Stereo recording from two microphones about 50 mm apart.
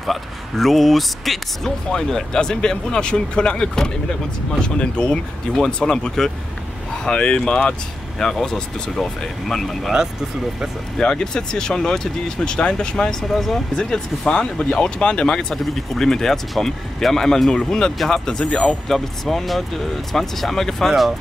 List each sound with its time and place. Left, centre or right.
0.0 s speech: centre
11.0 s speech: centre
15.5 s speech: centre
18.9 s speech: centre